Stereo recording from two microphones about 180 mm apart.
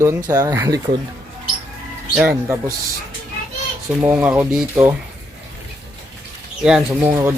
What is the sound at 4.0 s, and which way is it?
Speech, 10° right (ahead or behind).